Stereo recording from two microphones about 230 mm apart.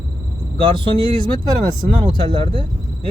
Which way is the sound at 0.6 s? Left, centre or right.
Right.